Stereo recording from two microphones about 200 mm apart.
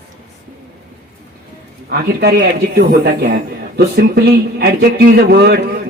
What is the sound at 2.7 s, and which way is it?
A man's voice, 55° right (ahead or behind).